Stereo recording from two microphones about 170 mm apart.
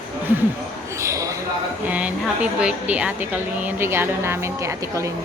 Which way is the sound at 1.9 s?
10° right (ahead or behind).